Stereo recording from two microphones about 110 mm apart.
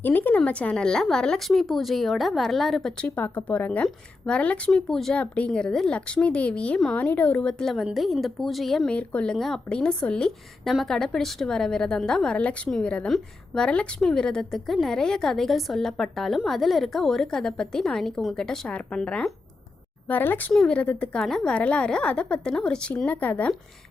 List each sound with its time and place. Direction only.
0.0 s a woman's voice: 15° left (ahead or behind)
3.2 s a woman's voice: 15° left (ahead or behind)